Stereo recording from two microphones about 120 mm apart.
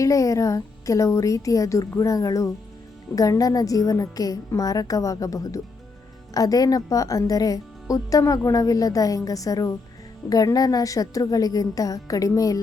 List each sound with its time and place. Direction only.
0.0 s a woman's voice: 25° left (ahead or behind)